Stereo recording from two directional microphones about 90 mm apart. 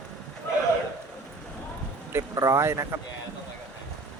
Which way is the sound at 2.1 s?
35° right (ahead or behind).